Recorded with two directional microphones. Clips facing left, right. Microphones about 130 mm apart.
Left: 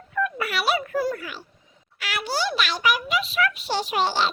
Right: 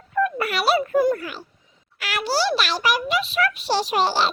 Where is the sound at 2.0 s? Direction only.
45° right (ahead or behind).